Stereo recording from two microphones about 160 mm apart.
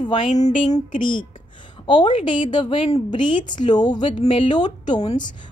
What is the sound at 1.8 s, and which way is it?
A woman's voice, 30° left (ahead or behind).